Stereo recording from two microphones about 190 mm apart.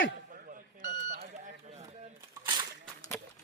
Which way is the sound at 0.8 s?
55° right (ahead or behind).